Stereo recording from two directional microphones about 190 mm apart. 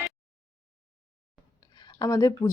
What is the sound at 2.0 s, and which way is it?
Speech, 20° left (ahead or behind).